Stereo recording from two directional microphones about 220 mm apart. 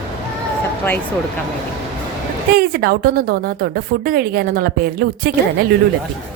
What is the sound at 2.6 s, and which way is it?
A woman's voice, 45° right (ahead or behind).